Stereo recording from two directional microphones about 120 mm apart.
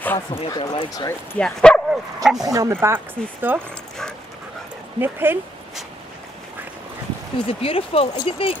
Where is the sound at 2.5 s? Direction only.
25° right (ahead or behind).